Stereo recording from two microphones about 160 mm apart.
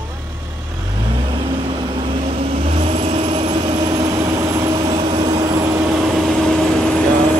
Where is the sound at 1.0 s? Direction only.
30° right (ahead or behind).